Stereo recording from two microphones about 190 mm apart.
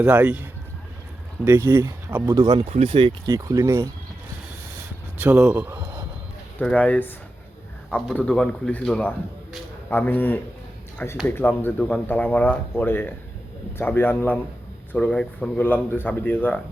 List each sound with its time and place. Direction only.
0.0 s speech: 5° right (ahead or behind)
1.5 s speech: 15° right (ahead or behind)
2.4 s speech: 25° right (ahead or behind)
5.2 s speech: 5° right (ahead or behind)
6.6 s speech: 10° left (ahead or behind)